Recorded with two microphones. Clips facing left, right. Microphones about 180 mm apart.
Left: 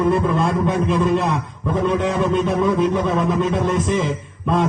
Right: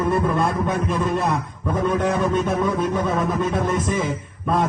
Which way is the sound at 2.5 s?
20° left (ahead or behind).